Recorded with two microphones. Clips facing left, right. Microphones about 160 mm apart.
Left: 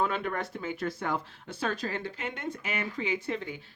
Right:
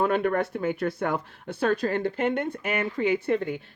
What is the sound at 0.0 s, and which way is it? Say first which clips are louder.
Speech: right 7 dB; 50° right (ahead or behind).